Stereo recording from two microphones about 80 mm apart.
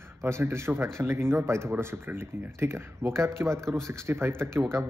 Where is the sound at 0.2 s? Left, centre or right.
Right.